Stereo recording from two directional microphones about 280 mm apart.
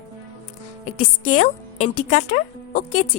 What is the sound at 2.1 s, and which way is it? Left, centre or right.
Speech, left.